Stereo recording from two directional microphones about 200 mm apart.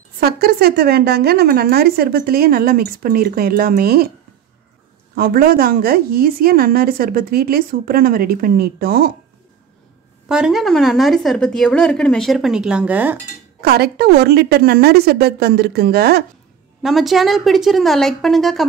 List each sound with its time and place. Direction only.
0.2 s a woman's voice: 50° right (ahead or behind)
5.1 s a woman's voice: 50° right (ahead or behind)
10.2 s a woman's voice: 5° right (ahead or behind)
13.6 s a woman's voice: 50° right (ahead or behind)
16.8 s a woman's voice: centre (ahead or behind)